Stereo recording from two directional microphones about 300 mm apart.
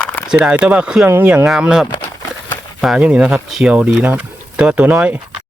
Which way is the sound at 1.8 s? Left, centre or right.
Centre.